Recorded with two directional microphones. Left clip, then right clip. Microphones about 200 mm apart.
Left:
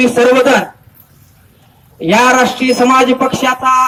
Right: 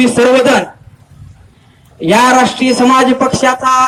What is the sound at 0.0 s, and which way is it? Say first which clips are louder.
Speech: even; 10° right (ahead or behind).